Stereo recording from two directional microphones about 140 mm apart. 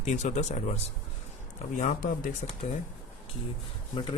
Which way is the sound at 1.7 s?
75° left (ahead or behind).